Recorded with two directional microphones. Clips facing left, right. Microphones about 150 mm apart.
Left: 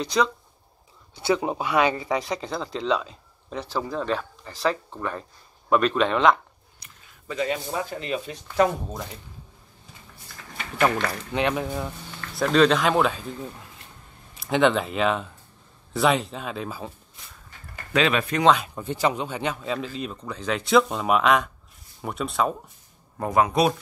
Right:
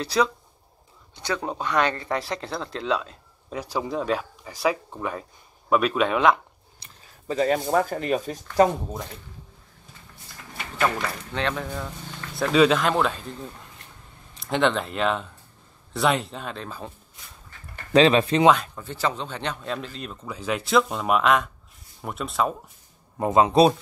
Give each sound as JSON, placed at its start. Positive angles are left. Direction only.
{"t": 0.0, "sound": "speech", "side_deg": -5}
{"t": 1.1, "sound": "speech", "side_deg": 10}
{"t": 3.5, "sound": "speech", "side_deg": -15}
{"t": 6.8, "sound": "speech", "side_deg": -35}
{"t": 11.3, "sound": "speech", "side_deg": 15}
{"t": 12.4, "sound": "speech", "side_deg": -5}
{"t": 17.9, "sound": "speech", "side_deg": -30}
{"t": 18.8, "sound": "speech", "side_deg": 15}
{"t": 23.1, "sound": "speech", "side_deg": -20}